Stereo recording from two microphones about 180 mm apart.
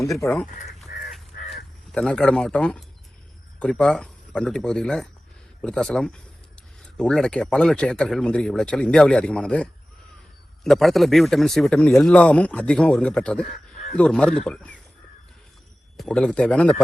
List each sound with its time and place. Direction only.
0.1 s a man's voice: 5° left (ahead or behind)
0.9 s crow: 55° left (ahead or behind)
1.9 s a man's voice: 5° left (ahead or behind)
16.0 s a man's voice: 5° left (ahead or behind)